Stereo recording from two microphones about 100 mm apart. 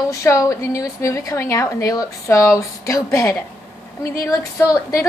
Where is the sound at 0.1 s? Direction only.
35° left (ahead or behind).